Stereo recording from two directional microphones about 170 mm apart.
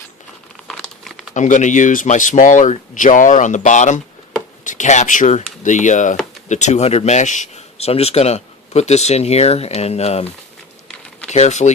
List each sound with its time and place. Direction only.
0.7 s crumpling: centre (ahead or behind)
1.3 s speech: 45° left (ahead or behind)
11.3 s speech: 40° left (ahead or behind)